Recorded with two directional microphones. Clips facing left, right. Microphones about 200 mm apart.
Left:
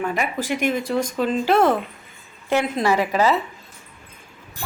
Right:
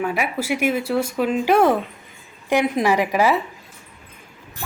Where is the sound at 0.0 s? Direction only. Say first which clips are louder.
Right 1 dB; 10° right (ahead or behind).